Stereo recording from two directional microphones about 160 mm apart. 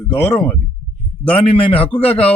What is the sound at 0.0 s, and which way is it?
Speech, 15° left (ahead or behind).